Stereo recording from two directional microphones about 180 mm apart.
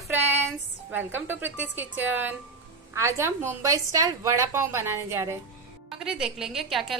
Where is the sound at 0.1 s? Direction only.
10° right (ahead or behind).